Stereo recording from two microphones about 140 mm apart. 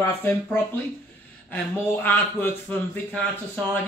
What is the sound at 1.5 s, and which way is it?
Speech, 15° left (ahead or behind).